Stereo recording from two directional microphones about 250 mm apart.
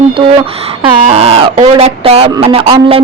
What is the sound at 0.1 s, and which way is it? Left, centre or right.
Speech, right.